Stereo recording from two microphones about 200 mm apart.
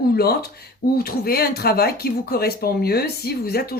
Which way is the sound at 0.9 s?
50° left (ahead or behind).